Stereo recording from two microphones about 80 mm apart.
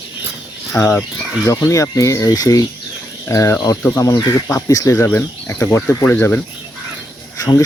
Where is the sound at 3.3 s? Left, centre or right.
Left.